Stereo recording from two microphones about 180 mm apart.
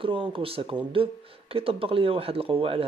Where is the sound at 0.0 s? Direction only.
30° right (ahead or behind).